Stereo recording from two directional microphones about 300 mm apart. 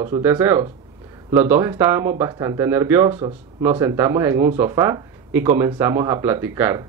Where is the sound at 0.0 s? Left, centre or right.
Centre.